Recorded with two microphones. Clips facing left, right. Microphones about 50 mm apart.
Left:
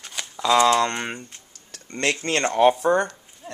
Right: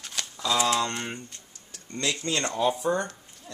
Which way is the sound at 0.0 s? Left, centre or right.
Centre.